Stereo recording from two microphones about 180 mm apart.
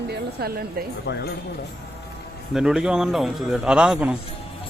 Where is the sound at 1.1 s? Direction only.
70° left (ahead or behind).